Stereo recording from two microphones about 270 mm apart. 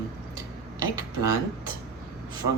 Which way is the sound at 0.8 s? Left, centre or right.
Centre.